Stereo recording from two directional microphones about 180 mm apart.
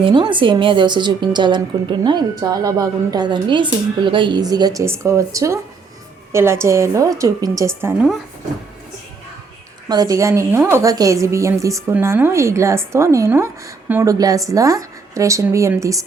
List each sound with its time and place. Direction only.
0.0 s a woman's voice: 25° right (ahead or behind)
9.9 s a woman's voice: 20° right (ahead or behind)